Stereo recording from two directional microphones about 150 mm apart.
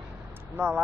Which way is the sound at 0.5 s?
10° right (ahead or behind).